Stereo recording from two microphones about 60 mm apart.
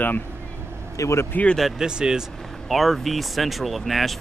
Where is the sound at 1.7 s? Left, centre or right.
Centre.